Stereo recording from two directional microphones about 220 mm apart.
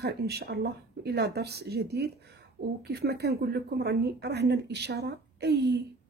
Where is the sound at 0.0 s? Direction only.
45° right (ahead or behind).